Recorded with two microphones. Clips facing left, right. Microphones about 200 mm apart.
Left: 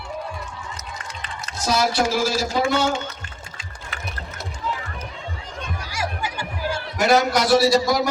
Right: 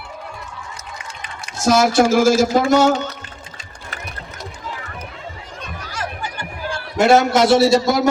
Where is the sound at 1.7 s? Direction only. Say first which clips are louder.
Right 7 dB; 45° right (ahead or behind).